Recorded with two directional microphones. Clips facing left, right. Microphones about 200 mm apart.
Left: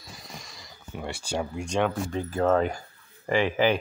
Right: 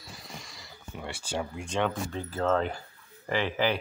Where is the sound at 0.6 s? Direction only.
40° left (ahead or behind).